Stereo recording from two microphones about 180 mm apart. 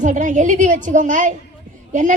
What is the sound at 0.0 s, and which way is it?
A woman's voice, 45° right (ahead or behind).